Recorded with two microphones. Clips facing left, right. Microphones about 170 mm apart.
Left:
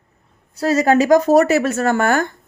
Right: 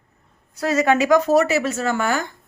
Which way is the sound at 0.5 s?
30° left (ahead or behind).